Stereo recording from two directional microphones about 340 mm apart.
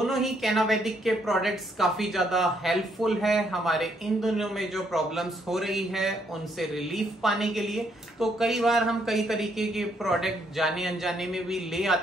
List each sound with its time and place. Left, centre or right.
0.0 s a woman's voice: centre